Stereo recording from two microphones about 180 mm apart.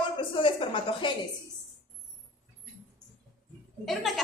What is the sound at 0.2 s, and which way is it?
Speech, 30° left (ahead or behind).